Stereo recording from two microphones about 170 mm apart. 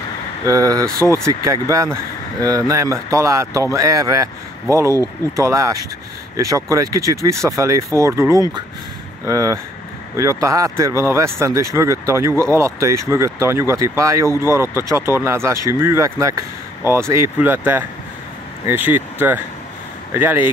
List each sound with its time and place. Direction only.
0.5 s speech: 20° right (ahead or behind)